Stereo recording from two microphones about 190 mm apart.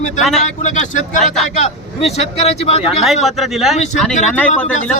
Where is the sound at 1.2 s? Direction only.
Centre (ahead or behind).